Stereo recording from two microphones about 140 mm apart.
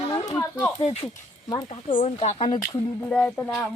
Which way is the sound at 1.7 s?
40° left (ahead or behind).